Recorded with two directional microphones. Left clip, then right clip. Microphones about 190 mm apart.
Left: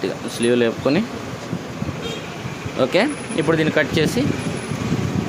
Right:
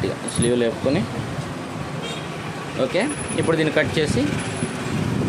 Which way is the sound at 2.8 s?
20° left (ahead or behind).